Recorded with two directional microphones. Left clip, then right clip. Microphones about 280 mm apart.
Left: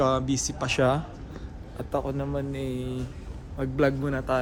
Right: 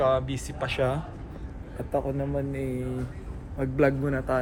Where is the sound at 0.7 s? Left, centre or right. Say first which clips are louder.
Left 4 dB; left.